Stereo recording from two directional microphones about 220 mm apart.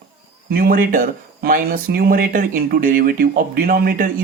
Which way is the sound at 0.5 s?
40° right (ahead or behind).